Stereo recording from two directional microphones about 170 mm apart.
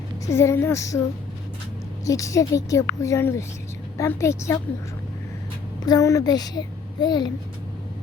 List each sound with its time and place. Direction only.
0.3 s a woman's voice: 15° left (ahead or behind)
2.0 s a woman's voice: 20° left (ahead or behind)
5.8 s a child's voice: 20° left (ahead or behind)